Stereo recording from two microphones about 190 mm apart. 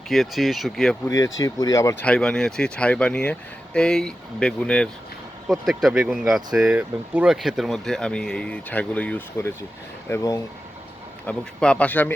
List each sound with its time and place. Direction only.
0.1 s speech: centre (ahead or behind)
1.0 s speech: 15° left (ahead or behind)